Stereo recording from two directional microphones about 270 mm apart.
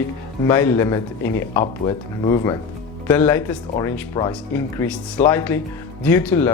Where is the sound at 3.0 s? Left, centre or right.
Centre.